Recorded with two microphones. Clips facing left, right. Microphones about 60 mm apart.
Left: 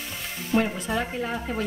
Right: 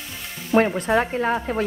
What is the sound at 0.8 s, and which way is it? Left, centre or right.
Speech, right.